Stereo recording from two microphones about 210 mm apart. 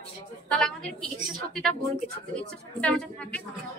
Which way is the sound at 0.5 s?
5° left (ahead or behind).